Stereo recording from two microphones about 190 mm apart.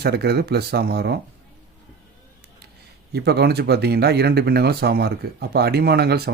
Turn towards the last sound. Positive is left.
turn(degrees=-55)  # may be behind; listen again after turning